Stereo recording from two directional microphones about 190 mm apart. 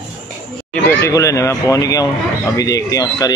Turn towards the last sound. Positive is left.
turn(degrees=20)  # may be behind; listen again after turning